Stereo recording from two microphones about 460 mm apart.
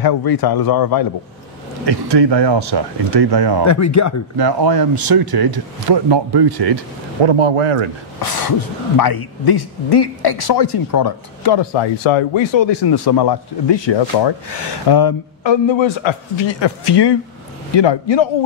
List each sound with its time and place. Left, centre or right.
0.0 s a man's voice: left
1.9 s speech: right
3.6 s speech: left
4.4 s speech: right
7.2 s speech: right
8.2 s speech: left